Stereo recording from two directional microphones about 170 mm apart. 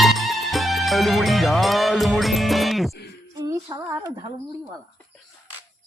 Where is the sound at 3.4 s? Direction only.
20° right (ahead or behind).